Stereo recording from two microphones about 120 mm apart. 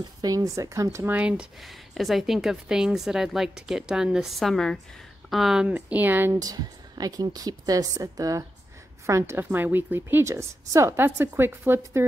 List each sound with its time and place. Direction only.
0.2 s a woman's voice: 30° right (ahead or behind)
0.9 s speech: 15° right (ahead or behind)
6.4 s a woman's voice: 30° right (ahead or behind)